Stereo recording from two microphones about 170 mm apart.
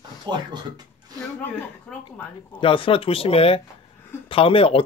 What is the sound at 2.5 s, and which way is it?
Speech, 30° left (ahead or behind).